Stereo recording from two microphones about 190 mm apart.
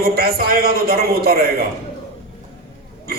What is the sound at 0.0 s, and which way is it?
A man's voice, 55° right (ahead or behind).